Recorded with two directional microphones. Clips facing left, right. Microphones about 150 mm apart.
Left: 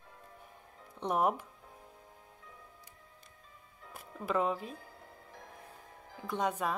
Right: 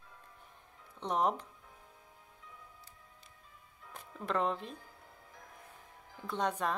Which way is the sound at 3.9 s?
5° left (ahead or behind).